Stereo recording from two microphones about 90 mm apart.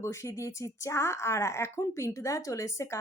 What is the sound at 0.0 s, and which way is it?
A woman's voice, 30° left (ahead or behind).